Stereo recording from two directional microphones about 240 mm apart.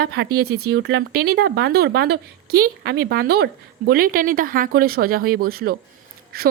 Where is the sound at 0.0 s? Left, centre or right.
Right.